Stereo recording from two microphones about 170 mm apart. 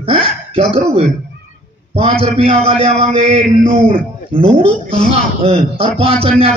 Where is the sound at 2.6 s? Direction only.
35° right (ahead or behind).